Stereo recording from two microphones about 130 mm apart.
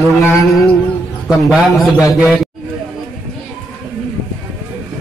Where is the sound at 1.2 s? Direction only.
Centre (ahead or behind).